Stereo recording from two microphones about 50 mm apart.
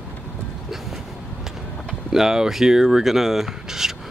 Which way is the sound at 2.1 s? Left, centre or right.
Centre.